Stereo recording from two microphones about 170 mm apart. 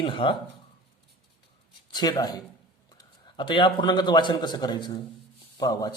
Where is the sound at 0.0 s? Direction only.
30° left (ahead or behind).